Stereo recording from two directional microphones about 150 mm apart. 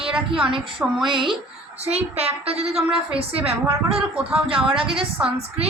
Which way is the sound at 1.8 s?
45° right (ahead or behind).